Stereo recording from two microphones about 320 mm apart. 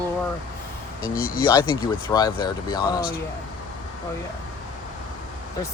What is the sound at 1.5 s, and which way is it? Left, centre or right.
Speech, centre.